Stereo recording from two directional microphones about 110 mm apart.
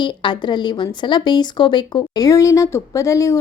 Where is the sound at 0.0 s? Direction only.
45° left (ahead or behind).